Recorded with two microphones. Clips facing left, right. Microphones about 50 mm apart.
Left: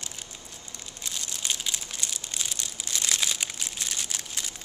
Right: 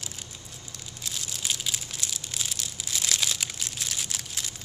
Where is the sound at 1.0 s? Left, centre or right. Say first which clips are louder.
Even; centre.